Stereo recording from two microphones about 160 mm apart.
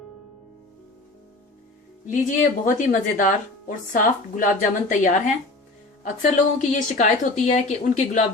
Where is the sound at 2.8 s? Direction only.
55° left (ahead or behind).